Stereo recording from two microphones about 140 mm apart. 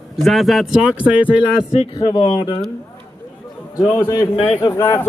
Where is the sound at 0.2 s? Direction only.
Centre (ahead or behind).